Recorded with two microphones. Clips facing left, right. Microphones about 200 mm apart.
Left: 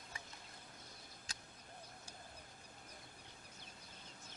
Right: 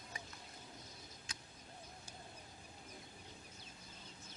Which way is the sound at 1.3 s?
35° left (ahead or behind).